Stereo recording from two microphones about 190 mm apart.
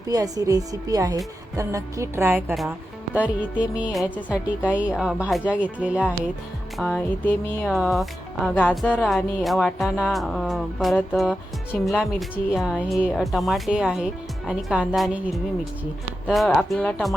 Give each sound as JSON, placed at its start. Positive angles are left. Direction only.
{"t": 0.1, "sound": "a woman's voice", "side_deg": -20}
{"t": 6.7, "sound": "speech", "side_deg": 5}